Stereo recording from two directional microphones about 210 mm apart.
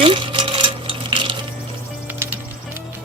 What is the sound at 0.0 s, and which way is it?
Coin, 25° right (ahead or behind).